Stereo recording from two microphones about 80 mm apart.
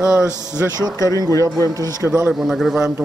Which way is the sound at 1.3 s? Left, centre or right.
Left.